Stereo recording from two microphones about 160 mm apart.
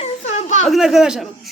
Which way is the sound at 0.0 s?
45° left (ahead or behind).